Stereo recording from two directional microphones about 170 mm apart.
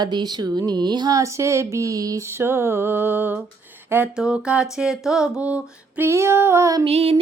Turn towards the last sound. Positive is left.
turn(degrees=-35)  # may be behind; listen again after turning